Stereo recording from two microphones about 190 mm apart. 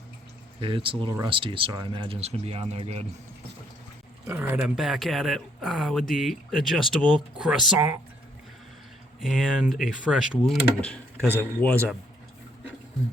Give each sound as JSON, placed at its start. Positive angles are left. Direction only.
{"t": 0.6, "sound": "speech", "side_deg": -25}
{"t": 4.3, "sound": "speech", "side_deg": -10}
{"t": 9.2, "sound": "speech", "side_deg": 0}
{"t": 10.8, "sound": "speech", "side_deg": 10}